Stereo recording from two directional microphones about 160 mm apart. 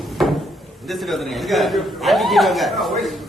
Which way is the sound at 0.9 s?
Centre (ahead or behind).